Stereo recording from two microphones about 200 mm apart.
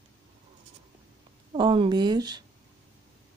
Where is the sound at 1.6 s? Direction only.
25° right (ahead or behind).